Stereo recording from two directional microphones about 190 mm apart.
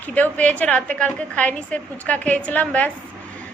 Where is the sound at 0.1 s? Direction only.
10° left (ahead or behind).